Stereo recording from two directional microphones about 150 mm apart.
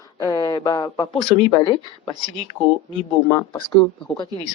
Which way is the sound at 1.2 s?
35° left (ahead or behind).